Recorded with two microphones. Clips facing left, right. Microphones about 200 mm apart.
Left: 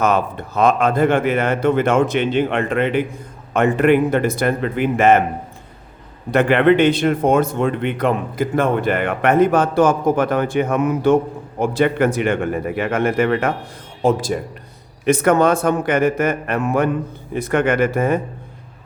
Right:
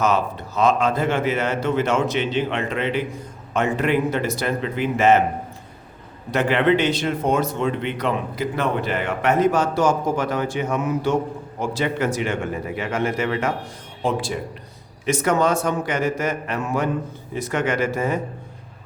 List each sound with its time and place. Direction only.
0.0 s speech: 55° left (ahead or behind)
6.3 s speech: 55° left (ahead or behind)
14.0 s speech: 45° left (ahead or behind)
15.0 s speech: 55° left (ahead or behind)